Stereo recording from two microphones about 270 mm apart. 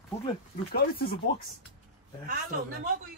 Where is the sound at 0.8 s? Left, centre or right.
Left.